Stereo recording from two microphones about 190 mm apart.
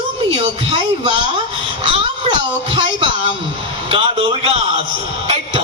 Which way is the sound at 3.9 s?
30° right (ahead or behind).